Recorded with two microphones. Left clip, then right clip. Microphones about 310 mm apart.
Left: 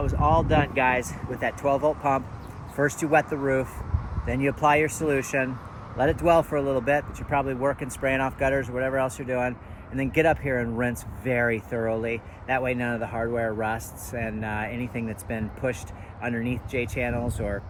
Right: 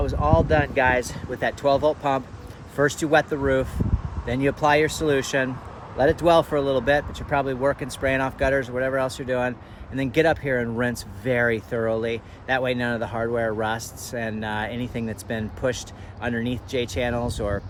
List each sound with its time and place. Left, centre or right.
0.0 s speech: centre